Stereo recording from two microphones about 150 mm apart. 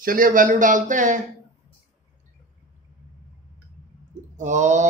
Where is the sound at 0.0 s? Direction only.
70° right (ahead or behind).